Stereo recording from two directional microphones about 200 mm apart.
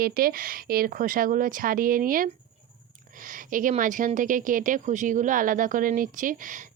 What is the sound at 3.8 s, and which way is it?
Speech, 40° right (ahead or behind).